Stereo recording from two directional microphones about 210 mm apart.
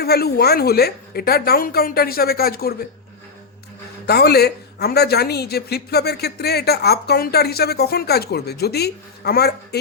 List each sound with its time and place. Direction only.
0.0 s speech: 50° left (ahead or behind)
4.0 s speech: 50° left (ahead or behind)